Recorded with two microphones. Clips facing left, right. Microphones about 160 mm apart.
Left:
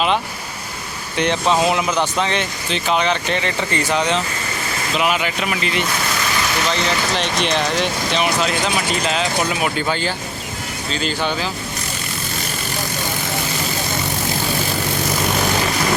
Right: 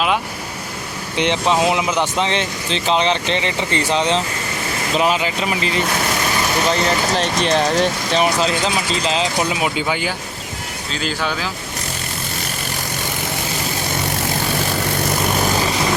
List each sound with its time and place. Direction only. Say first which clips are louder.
1.1 s speech: even; 20° right (ahead or behind); by 11.4 s centre (ahead or behind)